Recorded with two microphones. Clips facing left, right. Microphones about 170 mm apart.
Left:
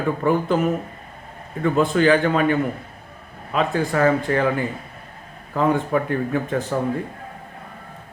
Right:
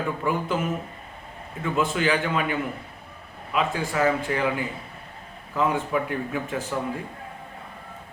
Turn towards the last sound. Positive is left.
turn(degrees=45)  # may be behind; listen again after turning